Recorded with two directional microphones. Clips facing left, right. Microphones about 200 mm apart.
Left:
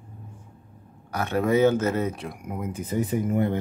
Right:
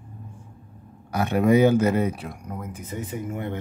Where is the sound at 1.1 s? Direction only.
15° right (ahead or behind).